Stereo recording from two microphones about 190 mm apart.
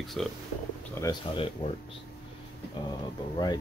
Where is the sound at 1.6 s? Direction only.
30° left (ahead or behind).